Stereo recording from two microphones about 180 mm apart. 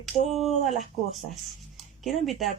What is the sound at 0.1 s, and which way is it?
Speech, 35° left (ahead or behind).